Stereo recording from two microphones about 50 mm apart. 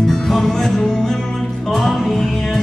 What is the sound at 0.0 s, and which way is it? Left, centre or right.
Music, centre.